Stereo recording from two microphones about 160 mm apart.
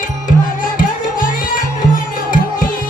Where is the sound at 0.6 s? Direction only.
60° left (ahead or behind).